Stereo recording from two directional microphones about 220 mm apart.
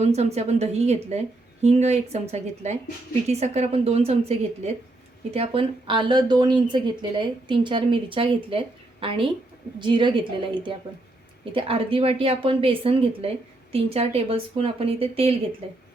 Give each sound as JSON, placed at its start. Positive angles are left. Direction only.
{"t": 0.0, "sound": "a woman's voice", "side_deg": -30}